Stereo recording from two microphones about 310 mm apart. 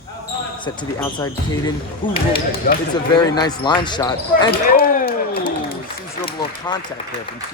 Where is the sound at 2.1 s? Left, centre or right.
Left.